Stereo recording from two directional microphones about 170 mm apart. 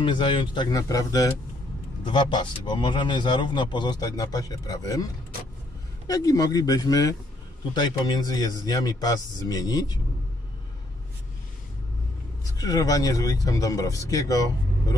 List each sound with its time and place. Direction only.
0.0 s a man's voice: 30° left (ahead or behind)
6.0 s a man's voice: 20° left (ahead or behind)
12.5 s a man's voice: 20° left (ahead or behind)